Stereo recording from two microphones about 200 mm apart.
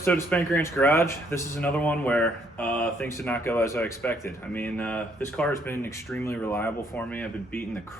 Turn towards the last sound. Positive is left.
turn(degrees=10)  # may be behind; listen again after turning